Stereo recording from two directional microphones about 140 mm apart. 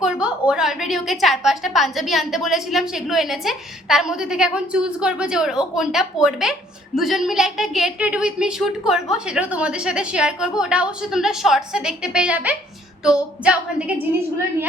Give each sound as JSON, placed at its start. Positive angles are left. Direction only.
{"t": 0.0, "sound": "a woman's voice", "side_deg": -5}